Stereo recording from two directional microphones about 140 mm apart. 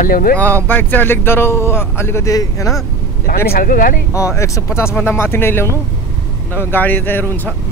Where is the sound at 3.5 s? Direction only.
80° left.